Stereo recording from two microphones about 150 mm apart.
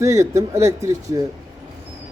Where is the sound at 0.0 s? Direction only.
20° right (ahead or behind).